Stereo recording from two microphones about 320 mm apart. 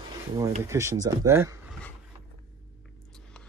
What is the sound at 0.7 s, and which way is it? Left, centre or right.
Speech, centre.